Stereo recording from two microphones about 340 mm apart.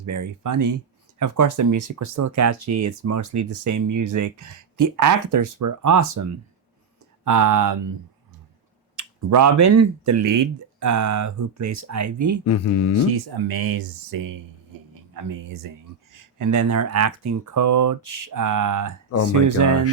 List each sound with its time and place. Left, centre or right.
0.0 s speech: right
7.3 s speech: right
9.3 s speech: right
12.5 s speech: left
13.3 s speech: right
15.1 s speech: right